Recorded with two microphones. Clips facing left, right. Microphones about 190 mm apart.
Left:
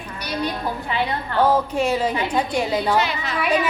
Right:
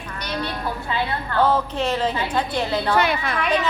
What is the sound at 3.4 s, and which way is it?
Speech, 10° left (ahead or behind).